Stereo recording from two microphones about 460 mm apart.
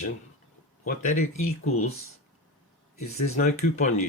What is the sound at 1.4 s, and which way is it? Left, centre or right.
Speech, left.